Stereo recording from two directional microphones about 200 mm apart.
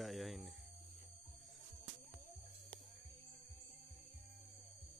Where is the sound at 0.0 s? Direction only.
Centre (ahead or behind).